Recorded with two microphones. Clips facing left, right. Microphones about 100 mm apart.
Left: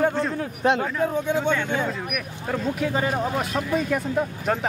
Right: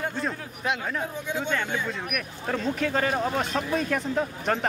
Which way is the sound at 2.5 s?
10° left (ahead or behind).